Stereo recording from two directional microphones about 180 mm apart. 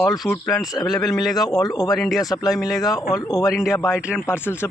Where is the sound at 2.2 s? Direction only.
20° left (ahead or behind).